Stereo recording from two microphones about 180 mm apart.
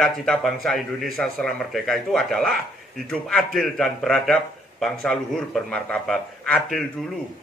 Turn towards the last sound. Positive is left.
turn(degrees=5)  # may be behind; listen again after turning